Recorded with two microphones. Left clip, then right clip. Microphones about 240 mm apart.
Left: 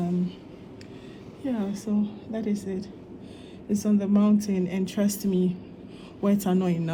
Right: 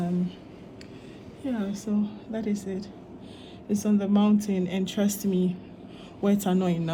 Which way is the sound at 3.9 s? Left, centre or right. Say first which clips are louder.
Even; left.